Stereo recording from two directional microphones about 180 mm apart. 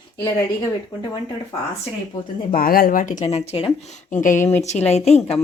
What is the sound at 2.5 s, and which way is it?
A woman's voice, 55° left (ahead or behind).